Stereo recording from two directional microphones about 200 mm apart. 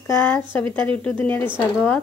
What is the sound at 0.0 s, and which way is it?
A woman's voice, 10° left (ahead or behind).